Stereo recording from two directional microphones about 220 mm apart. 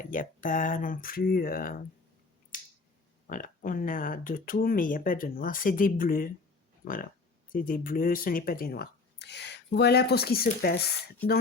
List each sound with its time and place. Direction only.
0.0 s speech: 35° left (ahead or behind)
2.5 s finger snapping: 35° left (ahead or behind)
3.2 s speech: 35° left (ahead or behind)
11.2 s speech: 10° left (ahead or behind)